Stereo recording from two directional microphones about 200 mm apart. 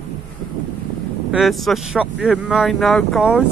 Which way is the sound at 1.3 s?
Centre (ahead or behind).